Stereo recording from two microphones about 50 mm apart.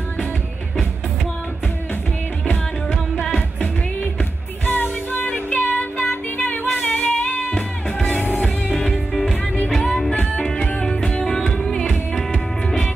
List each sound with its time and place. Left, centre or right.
3.2 s music: centre
4.0 s music: left
6.9 s female singing: left
8.7 s music: centre
10.4 s music: centre